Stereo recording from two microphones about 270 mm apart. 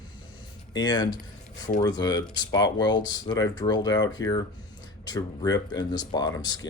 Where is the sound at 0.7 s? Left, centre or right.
Centre.